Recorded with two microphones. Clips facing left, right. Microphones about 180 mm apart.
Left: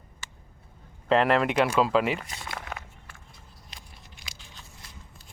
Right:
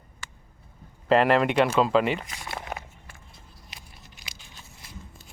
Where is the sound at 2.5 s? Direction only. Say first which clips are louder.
Right 4 dB; 25° right (ahead or behind).